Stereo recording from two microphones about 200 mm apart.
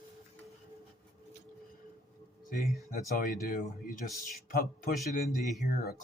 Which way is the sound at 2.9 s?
45° left (ahead or behind).